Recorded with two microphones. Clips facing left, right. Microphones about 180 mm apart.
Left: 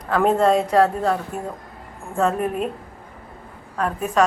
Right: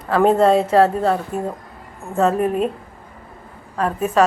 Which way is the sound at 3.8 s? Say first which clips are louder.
Right 3 dB; centre (ahead or behind).